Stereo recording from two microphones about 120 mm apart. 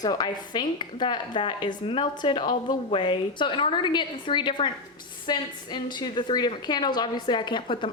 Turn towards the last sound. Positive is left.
turn(degrees=40)  # may be behind; listen again after turning